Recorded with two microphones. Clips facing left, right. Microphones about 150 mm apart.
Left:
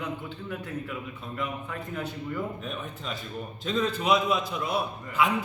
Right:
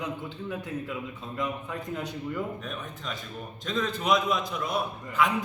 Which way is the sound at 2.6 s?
5° left (ahead or behind).